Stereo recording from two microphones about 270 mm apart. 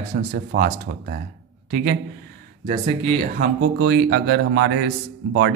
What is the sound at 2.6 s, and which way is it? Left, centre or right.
Speech, right.